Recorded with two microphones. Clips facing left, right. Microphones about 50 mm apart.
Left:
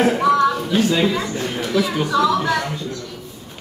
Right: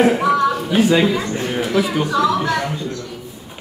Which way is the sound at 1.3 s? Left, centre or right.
Centre.